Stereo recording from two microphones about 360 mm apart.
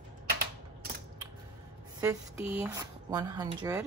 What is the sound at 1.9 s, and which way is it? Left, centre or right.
A woman's voice, centre.